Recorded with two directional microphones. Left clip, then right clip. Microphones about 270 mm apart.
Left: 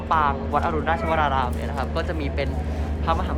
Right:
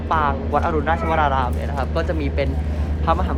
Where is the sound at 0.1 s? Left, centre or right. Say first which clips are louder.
Right 1 dB; centre.